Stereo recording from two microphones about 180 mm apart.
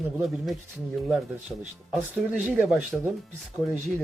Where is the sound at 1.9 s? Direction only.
5° right (ahead or behind).